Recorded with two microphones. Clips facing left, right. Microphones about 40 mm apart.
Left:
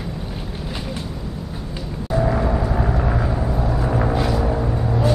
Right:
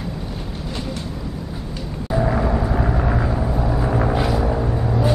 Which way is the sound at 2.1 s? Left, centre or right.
Centre.